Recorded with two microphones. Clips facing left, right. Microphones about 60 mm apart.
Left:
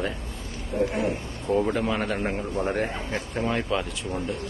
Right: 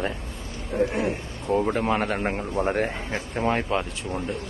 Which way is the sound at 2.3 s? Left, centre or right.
Right.